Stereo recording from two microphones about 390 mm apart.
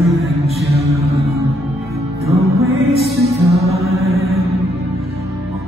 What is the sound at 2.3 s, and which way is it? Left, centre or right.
Music, centre.